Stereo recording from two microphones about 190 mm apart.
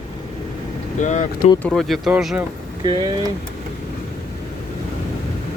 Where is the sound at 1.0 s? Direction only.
40° left (ahead or behind).